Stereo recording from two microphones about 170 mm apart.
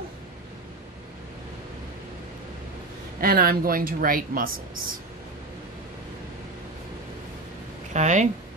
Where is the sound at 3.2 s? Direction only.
60° right (ahead or behind).